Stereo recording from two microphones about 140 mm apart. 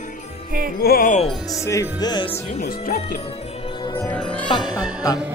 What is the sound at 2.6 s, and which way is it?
Speech, 90° left.